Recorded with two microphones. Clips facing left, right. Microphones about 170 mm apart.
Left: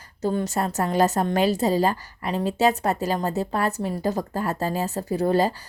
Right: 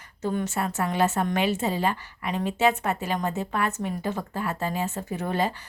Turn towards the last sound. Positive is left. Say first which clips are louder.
# left 6 dB
turn(degrees=35)  # may be behind; listen again after turning